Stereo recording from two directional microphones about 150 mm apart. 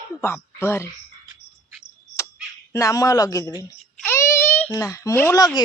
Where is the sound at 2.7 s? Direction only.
20° left (ahead or behind).